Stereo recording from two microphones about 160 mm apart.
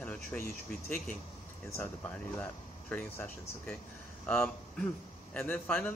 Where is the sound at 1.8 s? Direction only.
10° left (ahead or behind).